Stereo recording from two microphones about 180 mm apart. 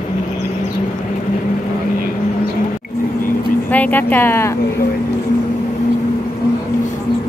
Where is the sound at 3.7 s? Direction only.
10° left (ahead or behind).